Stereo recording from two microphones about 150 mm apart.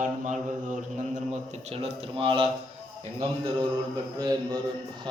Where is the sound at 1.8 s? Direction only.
35° right (ahead or behind).